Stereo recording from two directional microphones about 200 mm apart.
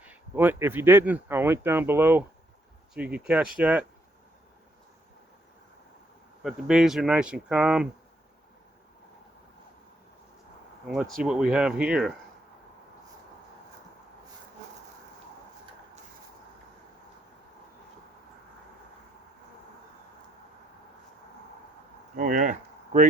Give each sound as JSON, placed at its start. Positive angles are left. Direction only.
{"t": 0.0, "sound": "speech", "side_deg": -10}
{"t": 6.4, "sound": "speech", "side_deg": -5}
{"t": 10.8, "sound": "speech", "side_deg": 0}
{"t": 22.1, "sound": "a sound", "side_deg": -40}